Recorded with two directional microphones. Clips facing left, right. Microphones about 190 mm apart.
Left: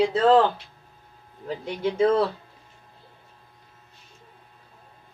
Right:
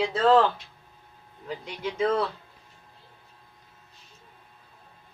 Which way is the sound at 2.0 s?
30° left (ahead or behind).